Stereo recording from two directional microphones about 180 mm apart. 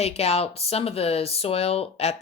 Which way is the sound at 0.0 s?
35° left (ahead or behind).